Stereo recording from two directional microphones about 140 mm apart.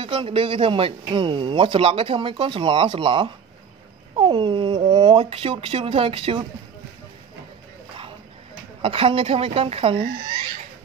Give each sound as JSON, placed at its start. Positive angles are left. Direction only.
{"t": 0.0, "sound": "a man's voice", "side_deg": -40}
{"t": 8.8, "sound": "a woman's voice", "side_deg": -40}